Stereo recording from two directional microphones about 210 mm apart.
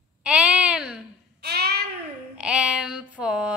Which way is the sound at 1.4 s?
50° right (ahead or behind).